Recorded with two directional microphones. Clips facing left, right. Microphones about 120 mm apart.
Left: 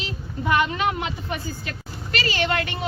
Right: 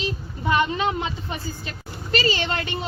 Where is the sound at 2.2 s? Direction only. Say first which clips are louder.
Left 2 dB; 25° right (ahead or behind).